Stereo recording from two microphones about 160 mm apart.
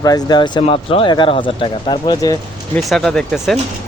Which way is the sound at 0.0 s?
25° left (ahead or behind).